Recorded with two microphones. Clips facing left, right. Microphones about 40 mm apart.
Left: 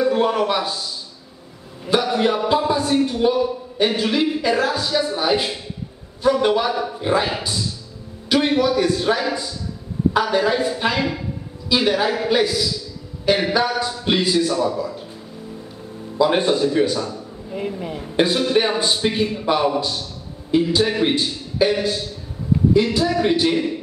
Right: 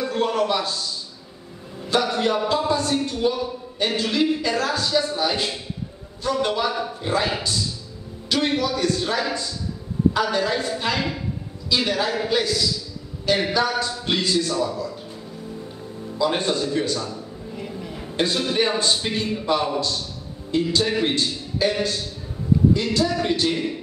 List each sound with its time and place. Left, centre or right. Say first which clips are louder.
0.0 s a man's voice: left 4 dB; centre
16.2 s a man's voice: left 5 dB; centre
17.6 s speech: left 8 dB; left
18.1 s a man's voice: left 5 dB; centre
22.8 s a man's voice: left 4 dB; centre